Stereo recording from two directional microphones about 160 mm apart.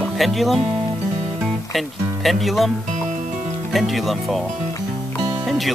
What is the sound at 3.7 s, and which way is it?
Speech, centre (ahead or behind).